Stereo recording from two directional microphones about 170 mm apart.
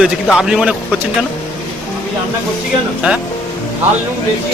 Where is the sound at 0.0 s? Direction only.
5° right (ahead or behind).